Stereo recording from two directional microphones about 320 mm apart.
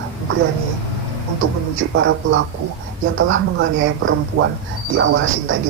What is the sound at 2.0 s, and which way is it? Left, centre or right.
Speech, right.